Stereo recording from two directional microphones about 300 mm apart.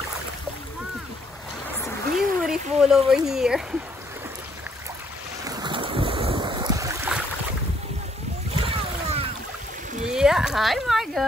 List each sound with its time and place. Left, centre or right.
2.1 s speech: centre
5.4 s boat: centre
8.6 s boat: centre
10.0 s a sound: centre